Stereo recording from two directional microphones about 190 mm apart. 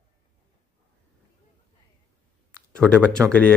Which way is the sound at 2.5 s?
5° left (ahead or behind).